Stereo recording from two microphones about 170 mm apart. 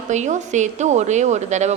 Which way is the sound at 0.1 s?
45° right (ahead or behind).